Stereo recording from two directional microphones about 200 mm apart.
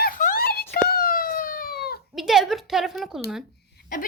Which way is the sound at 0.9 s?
45° left (ahead or behind).